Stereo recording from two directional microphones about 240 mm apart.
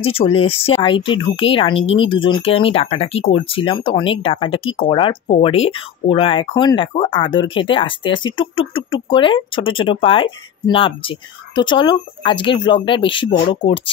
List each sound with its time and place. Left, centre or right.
0.0 s speech: left